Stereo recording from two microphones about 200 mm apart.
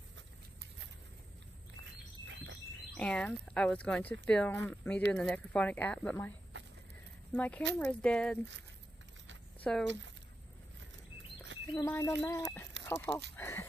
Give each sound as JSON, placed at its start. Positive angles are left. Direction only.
{"t": 2.2, "sound": "insect", "side_deg": -70}
{"t": 2.9, "sound": "speech", "side_deg": 5}
{"t": 7.3, "sound": "speech", "side_deg": 10}
{"t": 9.6, "sound": "speech", "side_deg": 5}
{"t": 11.7, "sound": "speech", "side_deg": 15}